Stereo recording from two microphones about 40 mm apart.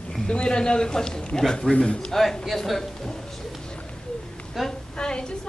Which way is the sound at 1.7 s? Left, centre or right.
Left.